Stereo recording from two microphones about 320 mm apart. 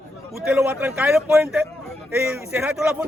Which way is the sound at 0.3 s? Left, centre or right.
Centre.